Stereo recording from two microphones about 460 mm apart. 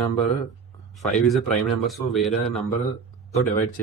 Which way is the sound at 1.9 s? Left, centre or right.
Centre.